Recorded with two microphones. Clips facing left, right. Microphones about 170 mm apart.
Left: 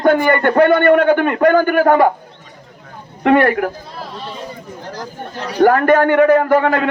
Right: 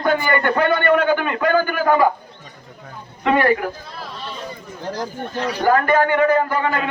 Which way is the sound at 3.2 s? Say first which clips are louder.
Left 4 dB; 60° left (ahead or behind).